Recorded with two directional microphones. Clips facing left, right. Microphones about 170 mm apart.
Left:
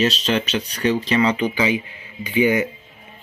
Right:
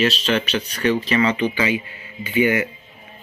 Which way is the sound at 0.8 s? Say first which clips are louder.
Even; 15° left (ahead or behind).